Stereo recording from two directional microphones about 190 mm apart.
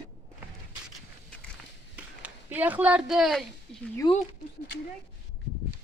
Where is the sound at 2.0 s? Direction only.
10° right (ahead or behind).